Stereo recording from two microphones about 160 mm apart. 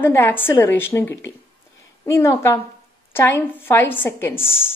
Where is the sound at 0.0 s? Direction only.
15° left (ahead or behind).